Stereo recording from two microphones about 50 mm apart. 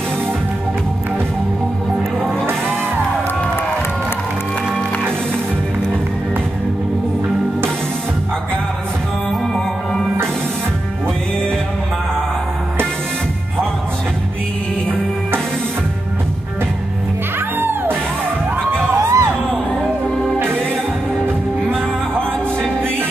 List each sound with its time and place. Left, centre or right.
17.6 s music: right
18.9 s music: right
20.3 s music: right